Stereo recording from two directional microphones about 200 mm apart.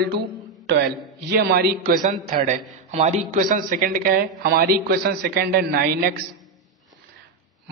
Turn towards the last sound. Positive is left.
turn(degrees=-50)  # may be behind; listen again after turning